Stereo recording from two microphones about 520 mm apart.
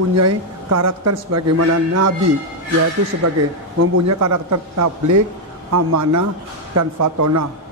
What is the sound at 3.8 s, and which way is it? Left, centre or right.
A man's voice, right.